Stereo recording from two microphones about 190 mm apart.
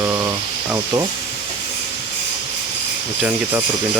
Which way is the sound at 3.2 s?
10° right (ahead or behind).